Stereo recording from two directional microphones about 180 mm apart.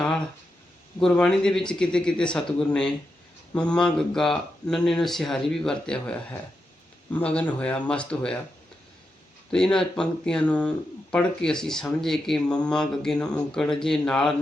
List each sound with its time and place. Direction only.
0.9 s speech: 5° left (ahead or behind)
9.5 s speech: 5° left (ahead or behind)